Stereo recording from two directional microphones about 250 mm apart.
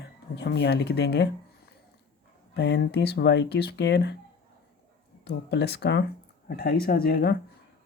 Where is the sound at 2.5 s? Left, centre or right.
Left.